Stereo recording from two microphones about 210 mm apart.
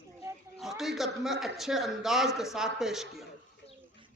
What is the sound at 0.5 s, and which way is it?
Speech, centre (ahead or behind).